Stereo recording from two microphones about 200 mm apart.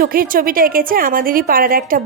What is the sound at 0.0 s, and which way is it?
A woman's voice, 45° right (ahead or behind).